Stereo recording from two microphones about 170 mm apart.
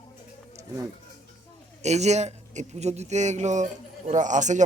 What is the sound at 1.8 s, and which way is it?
A man's voice, 40° right (ahead or behind).